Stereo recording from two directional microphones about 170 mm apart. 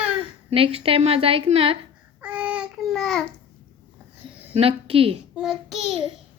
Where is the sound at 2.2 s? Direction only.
5° right (ahead or behind).